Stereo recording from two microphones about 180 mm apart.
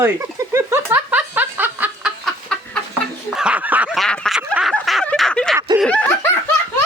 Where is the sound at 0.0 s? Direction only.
15° right (ahead or behind).